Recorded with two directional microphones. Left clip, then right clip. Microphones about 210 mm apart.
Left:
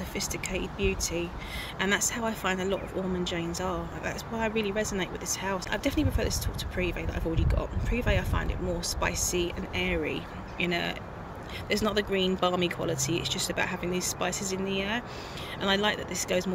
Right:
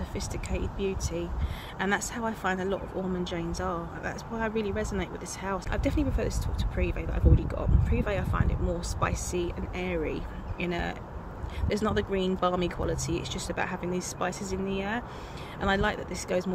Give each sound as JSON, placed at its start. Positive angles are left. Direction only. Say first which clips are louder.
{"t": 0.1, "sound": "speech", "louder": "left 5 dB", "side_deg": 0}